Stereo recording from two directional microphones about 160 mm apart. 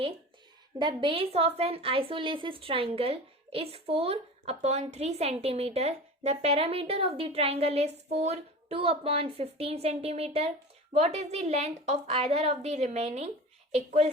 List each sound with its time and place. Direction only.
0.8 s a woman's voice: 30° right (ahead or behind)